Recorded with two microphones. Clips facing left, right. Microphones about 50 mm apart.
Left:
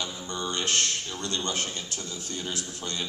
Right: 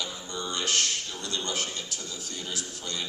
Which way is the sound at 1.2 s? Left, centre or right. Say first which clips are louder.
Left 2 dB; left.